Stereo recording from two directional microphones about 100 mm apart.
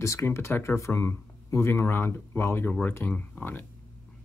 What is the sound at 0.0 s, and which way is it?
Speech, 30° left (ahead or behind).